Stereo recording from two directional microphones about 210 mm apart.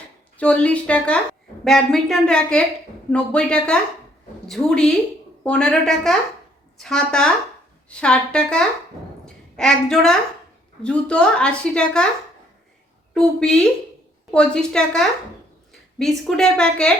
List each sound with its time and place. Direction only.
0.3 s a woman's voice: 5° left (ahead or behind)
13.1 s a woman's voice: 5° left (ahead or behind)